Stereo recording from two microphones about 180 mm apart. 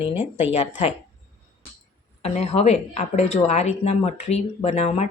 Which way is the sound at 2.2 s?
35° left (ahead or behind).